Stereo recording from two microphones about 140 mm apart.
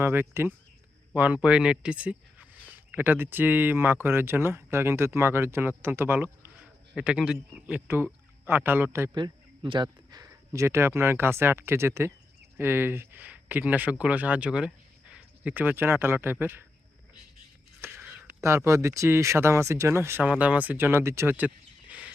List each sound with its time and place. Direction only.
0.0 s speech: 15° right (ahead or behind)
9.1 s speech: 35° right (ahead or behind); by 16.6 s 15° right (ahead or behind)
17.7 s a sound: 15° right (ahead or behind)
18.4 s speech: 20° right (ahead or behind)